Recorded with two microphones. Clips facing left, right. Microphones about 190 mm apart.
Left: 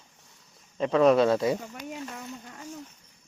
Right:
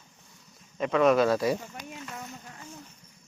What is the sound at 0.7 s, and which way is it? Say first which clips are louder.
Speech: left 2 dB; 30° left (ahead or behind).